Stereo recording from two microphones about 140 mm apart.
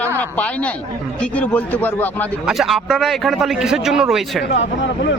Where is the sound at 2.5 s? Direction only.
Centre (ahead or behind).